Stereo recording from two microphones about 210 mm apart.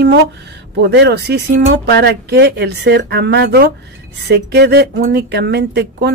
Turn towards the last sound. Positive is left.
turn(degrees=-50)  # may be behind; listen again after turning